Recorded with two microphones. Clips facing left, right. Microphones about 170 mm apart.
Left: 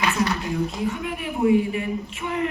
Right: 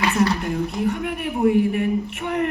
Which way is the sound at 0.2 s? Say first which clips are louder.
Right 3 dB; 60° right (ahead or behind).